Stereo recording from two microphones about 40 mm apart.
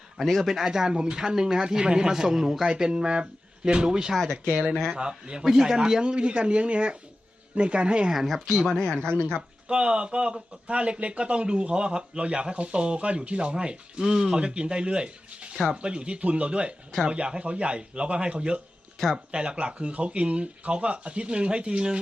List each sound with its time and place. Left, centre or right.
0.2 s speech: centre
0.4 s speech: centre
2.9 s speech: right
8.3 s speech: centre
8.7 s speech: centre
9.6 s speech: right